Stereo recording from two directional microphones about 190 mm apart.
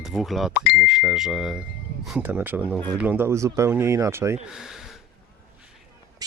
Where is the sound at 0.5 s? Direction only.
55° left (ahead or behind).